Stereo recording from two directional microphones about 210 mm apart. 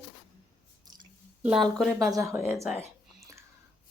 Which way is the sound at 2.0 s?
15° right (ahead or behind).